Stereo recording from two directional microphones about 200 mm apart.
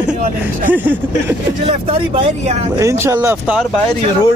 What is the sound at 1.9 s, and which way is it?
Speech, 30° right (ahead or behind).